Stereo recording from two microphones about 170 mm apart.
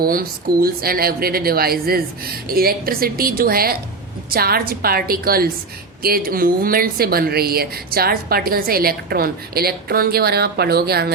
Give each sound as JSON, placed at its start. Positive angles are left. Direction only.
{"t": 0.0, "sound": "a woman's voice", "side_deg": -60}